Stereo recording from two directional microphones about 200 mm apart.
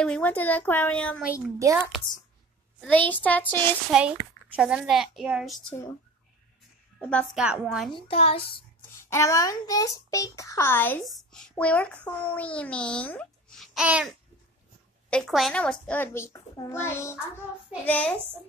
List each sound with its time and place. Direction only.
0.0 s a child's voice: 5° left (ahead or behind)
1.3 s a child's voice: 15° right (ahead or behind)
2.9 s a child's voice: 10° left (ahead or behind)
3.9 s a child's voice: centre (ahead or behind)
7.0 s a woman's voice: 5° left (ahead or behind)
7.9 s a child's voice: 30° left (ahead or behind)
9.1 s a child's voice: 15° left (ahead or behind)